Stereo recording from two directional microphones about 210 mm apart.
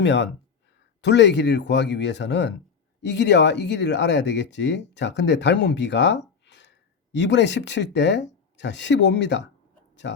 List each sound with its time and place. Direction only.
0.0 s speech: 55° left (ahead or behind)